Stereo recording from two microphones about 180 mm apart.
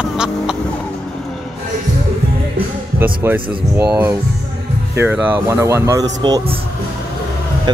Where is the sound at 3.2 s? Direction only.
10° right (ahead or behind); by 6.4 s 25° right (ahead or behind).